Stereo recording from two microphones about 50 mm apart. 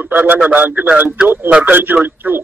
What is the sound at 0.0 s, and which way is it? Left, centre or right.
A man's voice, right.